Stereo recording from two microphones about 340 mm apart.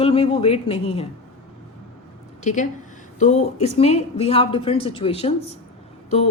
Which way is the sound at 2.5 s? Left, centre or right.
Left.